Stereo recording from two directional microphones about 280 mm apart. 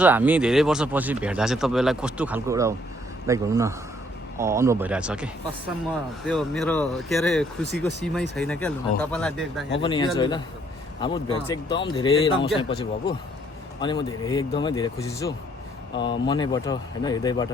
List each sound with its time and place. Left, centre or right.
0.0 s speech: centre
9.8 s speech: centre